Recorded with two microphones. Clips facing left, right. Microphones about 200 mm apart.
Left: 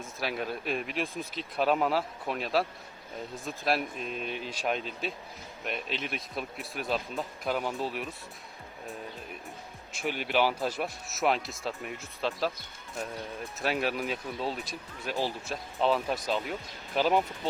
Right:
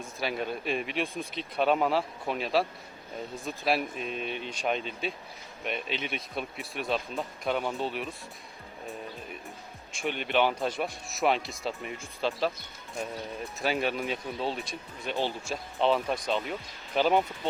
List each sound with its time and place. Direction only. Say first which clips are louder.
0.0 s speech: right 1 dB; centre (ahead or behind)
9.9 s speech: right 1 dB; 5° left (ahead or behind)
13.6 s speech: right 1 dB; centre (ahead or behind)